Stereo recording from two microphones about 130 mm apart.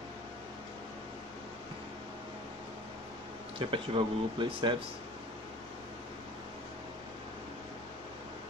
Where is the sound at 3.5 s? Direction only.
40° right (ahead or behind).